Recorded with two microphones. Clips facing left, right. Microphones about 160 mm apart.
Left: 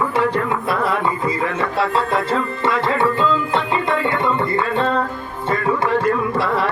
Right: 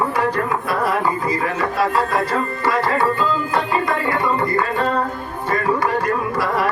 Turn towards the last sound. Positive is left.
turn(degrees=25)  # may be behind; listen again after turning